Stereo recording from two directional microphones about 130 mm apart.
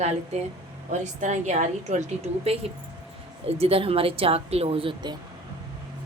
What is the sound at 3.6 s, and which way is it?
Speech, 50° right (ahead or behind).